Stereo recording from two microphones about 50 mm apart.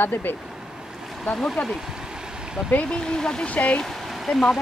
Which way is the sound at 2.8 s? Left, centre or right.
Centre.